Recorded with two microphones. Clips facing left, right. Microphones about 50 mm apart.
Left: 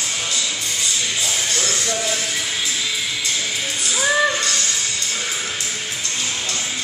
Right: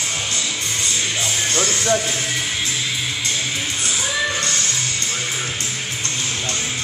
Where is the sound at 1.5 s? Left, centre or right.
Right.